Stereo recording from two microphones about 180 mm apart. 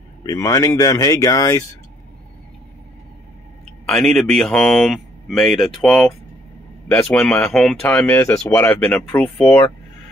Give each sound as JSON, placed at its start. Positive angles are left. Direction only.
{"t": 0.2, "sound": "speech", "side_deg": 20}
{"t": 3.8, "sound": "speech", "side_deg": 5}